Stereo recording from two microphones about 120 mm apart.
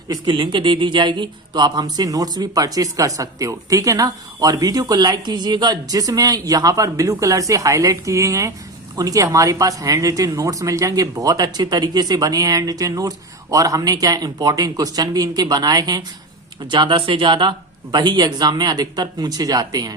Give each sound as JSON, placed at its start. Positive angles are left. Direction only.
{"t": 0.1, "sound": "speech", "side_deg": -40}